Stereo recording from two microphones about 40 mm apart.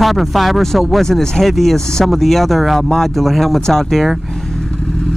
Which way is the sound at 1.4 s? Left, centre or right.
Centre.